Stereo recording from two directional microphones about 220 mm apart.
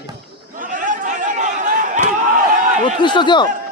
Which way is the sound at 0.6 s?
35° right (ahead or behind).